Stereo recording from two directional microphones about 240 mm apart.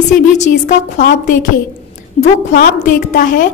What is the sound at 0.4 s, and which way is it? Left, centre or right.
A woman's voice, left.